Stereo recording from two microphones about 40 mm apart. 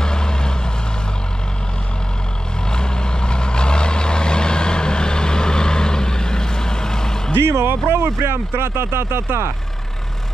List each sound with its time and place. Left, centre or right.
0.0 s vehicle: centre
2.7 s vehicle: left
7.4 s speech: right